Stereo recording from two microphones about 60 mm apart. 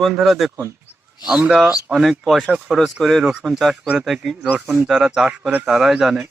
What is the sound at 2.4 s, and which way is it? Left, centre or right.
Speech, centre.